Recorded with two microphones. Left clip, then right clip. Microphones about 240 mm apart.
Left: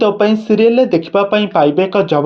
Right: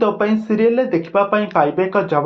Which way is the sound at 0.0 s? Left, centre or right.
Left.